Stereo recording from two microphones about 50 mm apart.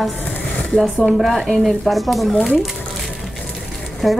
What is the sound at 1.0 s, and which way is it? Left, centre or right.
Speech, centre.